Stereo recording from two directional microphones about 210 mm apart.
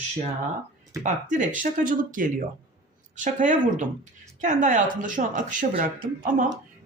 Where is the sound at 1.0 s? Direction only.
35° right (ahead or behind).